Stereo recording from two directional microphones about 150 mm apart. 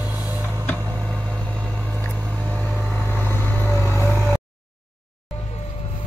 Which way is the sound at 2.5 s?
10° left (ahead or behind).